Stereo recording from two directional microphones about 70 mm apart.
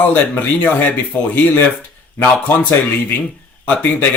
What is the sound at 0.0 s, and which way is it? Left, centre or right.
Speech, left.